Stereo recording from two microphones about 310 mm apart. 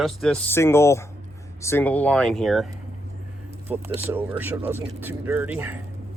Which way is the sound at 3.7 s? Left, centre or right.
Centre.